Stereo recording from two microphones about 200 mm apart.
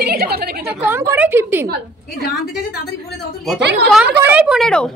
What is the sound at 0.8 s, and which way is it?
Speech, 10° right (ahead or behind).